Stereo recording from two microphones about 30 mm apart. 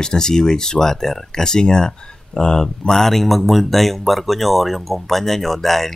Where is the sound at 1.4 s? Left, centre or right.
Left.